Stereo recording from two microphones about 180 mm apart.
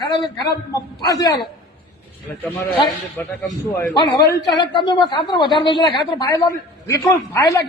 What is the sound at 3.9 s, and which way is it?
A woman's voice, 25° left (ahead or behind).